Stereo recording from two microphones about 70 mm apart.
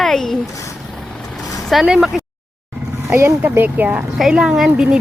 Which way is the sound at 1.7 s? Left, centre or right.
Centre.